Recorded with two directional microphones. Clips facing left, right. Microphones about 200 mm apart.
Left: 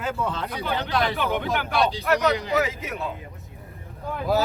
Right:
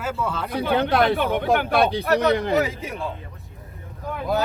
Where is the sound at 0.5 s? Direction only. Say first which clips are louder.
Right 11 dB; 55° right (ahead or behind).